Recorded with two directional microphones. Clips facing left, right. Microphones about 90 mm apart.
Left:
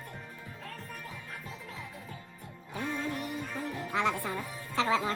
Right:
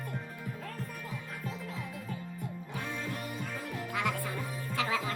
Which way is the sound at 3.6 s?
25° left (ahead or behind).